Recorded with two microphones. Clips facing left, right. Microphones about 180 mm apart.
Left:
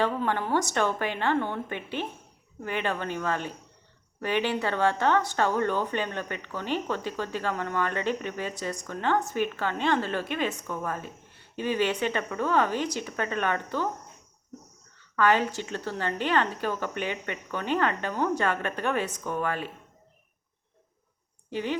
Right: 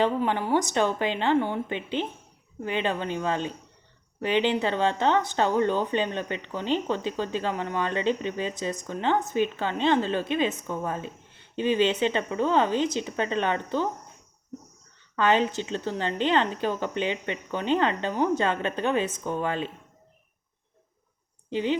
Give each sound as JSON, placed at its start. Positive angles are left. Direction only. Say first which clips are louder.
{"t": 0.0, "sound": "a woman's voice", "louder": "right 2 dB", "side_deg": -15}
{"t": 15.1, "sound": "speech", "louder": "right 1 dB", "side_deg": -20}
{"t": 21.5, "sound": "speech", "louder": "right 4 dB", "side_deg": -20}